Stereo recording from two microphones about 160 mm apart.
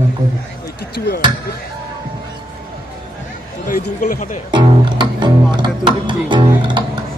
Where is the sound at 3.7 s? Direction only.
60° left (ahead or behind).